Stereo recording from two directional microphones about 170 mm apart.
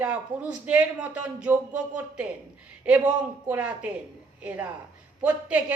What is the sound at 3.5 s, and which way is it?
Speech, 10° right (ahead or behind).